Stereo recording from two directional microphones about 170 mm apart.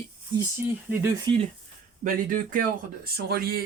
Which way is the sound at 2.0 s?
50° right (ahead or behind).